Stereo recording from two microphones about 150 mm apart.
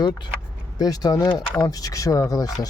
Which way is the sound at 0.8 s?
25° left (ahead or behind).